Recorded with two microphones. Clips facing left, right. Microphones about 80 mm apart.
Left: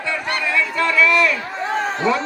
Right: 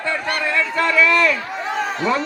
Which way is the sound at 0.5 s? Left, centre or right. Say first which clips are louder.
Even; right.